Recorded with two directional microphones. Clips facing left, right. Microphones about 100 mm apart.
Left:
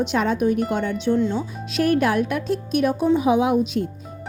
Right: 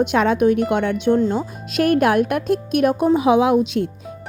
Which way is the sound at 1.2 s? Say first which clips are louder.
Right 3 dB; 50° right (ahead or behind).